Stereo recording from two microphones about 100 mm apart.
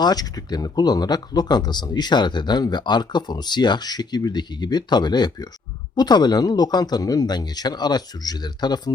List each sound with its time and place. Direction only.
0.0 s speech: 40° left (ahead or behind)